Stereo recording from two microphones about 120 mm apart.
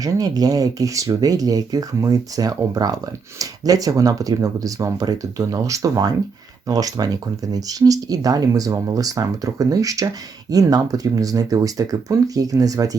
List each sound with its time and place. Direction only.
0.0 s speech: 30° right (ahead or behind)